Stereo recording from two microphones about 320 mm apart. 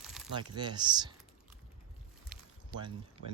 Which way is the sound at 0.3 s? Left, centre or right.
Centre.